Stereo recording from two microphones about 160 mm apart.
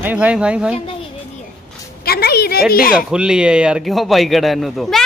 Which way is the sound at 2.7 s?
65° left (ahead or behind).